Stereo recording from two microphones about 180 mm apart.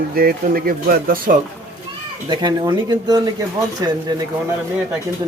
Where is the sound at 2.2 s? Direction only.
25° right (ahead or behind).